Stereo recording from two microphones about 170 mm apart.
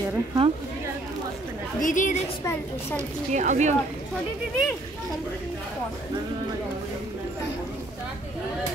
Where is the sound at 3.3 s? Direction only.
45° right (ahead or behind).